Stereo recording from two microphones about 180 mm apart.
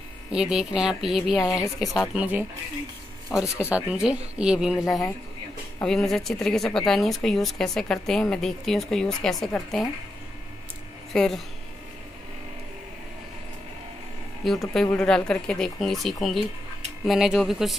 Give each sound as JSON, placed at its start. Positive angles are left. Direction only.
{"t": 0.3, "sound": "speech", "side_deg": -5}
{"t": 1.4, "sound": "a woman's voice", "side_deg": 20}
{"t": 1.8, "sound": "speech", "side_deg": 0}
{"t": 3.4, "sound": "speech", "side_deg": 15}
{"t": 3.7, "sound": "speech", "side_deg": -5}
{"t": 11.1, "sound": "speech", "side_deg": 0}
{"t": 14.7, "sound": "speech", "side_deg": 5}